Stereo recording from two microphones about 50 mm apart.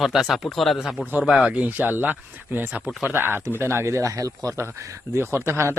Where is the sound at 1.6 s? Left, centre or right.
Right.